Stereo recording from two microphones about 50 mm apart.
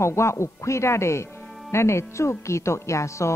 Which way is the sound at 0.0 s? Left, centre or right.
Left.